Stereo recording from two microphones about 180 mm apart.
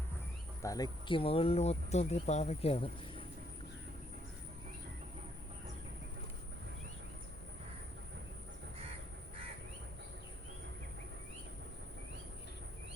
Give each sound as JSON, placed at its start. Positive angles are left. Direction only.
{"t": 0.6, "sound": "speech", "side_deg": 20}